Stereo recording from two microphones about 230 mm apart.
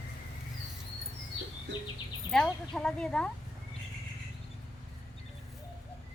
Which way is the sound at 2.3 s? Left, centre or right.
Centre.